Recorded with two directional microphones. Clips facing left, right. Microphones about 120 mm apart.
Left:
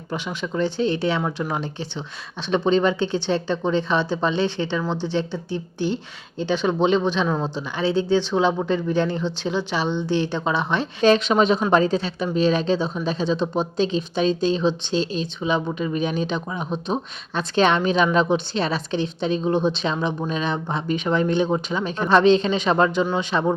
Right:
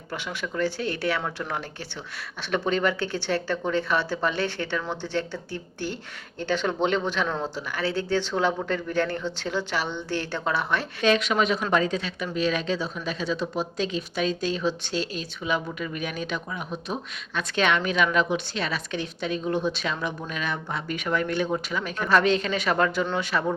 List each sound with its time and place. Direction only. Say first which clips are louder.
0.1 s speech: left 5 dB; 15° left (ahead or behind)
11.0 s speech: left 6 dB; 30° left (ahead or behind)